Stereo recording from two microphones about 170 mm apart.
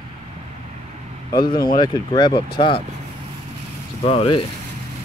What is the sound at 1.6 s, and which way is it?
Speech, 25° left (ahead or behind).